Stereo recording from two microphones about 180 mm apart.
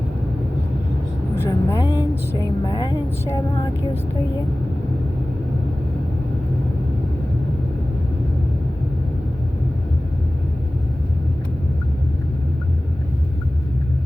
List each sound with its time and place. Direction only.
1.4 s speech: 20° left (ahead or behind)